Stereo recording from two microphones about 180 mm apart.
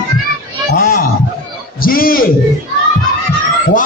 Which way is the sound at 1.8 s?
55° left (ahead or behind).